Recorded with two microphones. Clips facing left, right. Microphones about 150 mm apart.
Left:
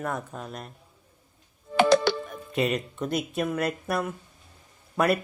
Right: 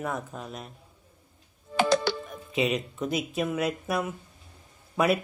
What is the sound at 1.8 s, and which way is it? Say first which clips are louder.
Music: left 4 dB; 65° left (ahead or behind).